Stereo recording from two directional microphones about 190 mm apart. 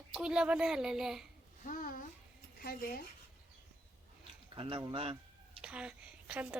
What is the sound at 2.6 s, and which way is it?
Speech, 50° left (ahead or behind).